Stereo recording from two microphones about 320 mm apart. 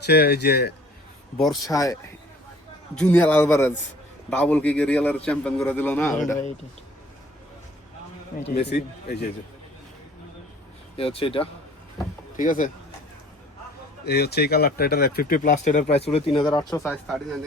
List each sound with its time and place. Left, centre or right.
0.0 s a man's voice: left
1.4 s a man's voice: centre
8.3 s speech: left
10.9 s speech: centre
14.0 s a man's voice: left; by 17.2 s centre